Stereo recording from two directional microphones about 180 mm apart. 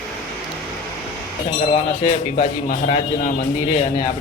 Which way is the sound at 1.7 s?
35° left (ahead or behind).